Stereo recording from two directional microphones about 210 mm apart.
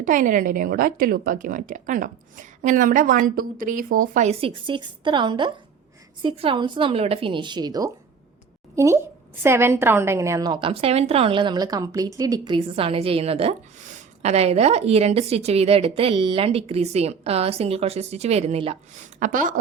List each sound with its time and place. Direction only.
0.0 s a woman's voice: 40° right (ahead or behind)